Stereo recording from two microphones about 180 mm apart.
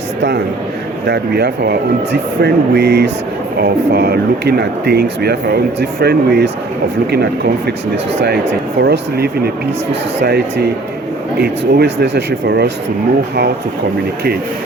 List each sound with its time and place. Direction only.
0.2 s speech: 65° right (ahead or behind)
8.8 s speech: 65° right (ahead or behind)
11.3 s speech: 60° right (ahead or behind)